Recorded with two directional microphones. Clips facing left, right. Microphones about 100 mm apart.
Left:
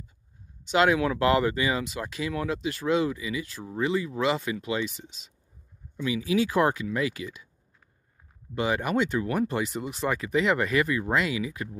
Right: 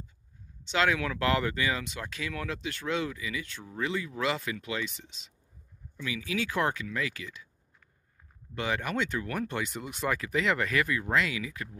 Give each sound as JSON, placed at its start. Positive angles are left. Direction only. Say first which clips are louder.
{"t": 0.7, "sound": "speech", "louder": "left 5 dB", "side_deg": 15}
{"t": 5.9, "sound": "speech", "louder": "left 8 dB", "side_deg": 15}
{"t": 8.5, "sound": "speech", "louder": "left 5 dB", "side_deg": 10}